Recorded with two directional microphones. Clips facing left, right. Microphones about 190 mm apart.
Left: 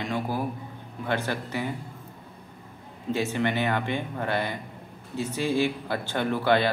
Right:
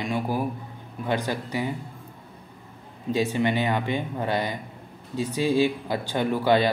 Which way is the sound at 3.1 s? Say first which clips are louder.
Right 3 dB; 15° right (ahead or behind).